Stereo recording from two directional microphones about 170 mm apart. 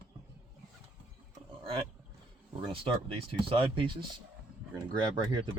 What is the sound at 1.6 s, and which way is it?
Speech, 30° right (ahead or behind).